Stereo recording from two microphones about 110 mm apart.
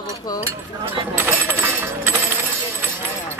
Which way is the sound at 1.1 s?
20° right (ahead or behind).